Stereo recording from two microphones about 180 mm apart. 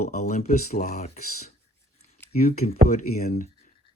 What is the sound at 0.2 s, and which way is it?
Speech, 40° left (ahead or behind).